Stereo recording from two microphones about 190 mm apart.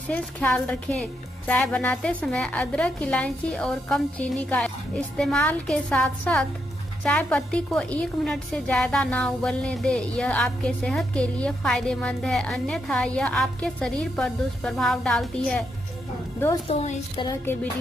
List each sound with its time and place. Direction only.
0.1 s a woman's voice: 5° left (ahead or behind)
16.6 s a woman's voice: 30° left (ahead or behind)